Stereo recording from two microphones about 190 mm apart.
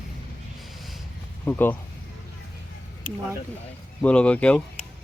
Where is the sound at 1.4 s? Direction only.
10° left (ahead or behind).